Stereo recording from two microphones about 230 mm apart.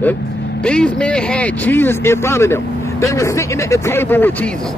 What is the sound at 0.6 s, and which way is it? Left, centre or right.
Speech, centre.